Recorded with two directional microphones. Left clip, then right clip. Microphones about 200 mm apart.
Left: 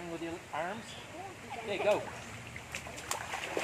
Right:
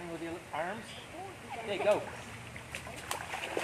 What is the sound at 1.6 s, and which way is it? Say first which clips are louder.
Speech: right 1 dB; 5° left (ahead or behind).